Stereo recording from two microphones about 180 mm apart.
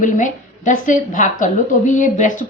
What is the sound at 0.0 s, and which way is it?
A woman's voice, 45° left (ahead or behind).